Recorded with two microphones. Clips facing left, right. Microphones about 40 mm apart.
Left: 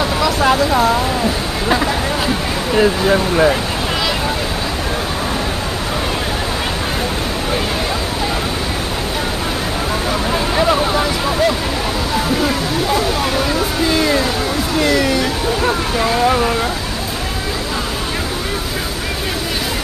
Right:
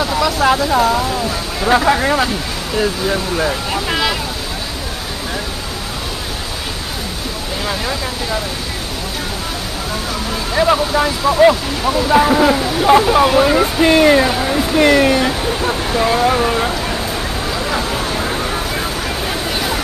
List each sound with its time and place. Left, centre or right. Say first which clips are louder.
0.0 s vehicle: even; centre
2.7 s speech: left 4 dB; centre
10.5 s vehicle: right 3 dB; centre
11.4 s speech: right 7 dB; centre
12.1 s speech: right 7 dB; right
13.8 s speech: right 6 dB; right
16.3 s speech: even; centre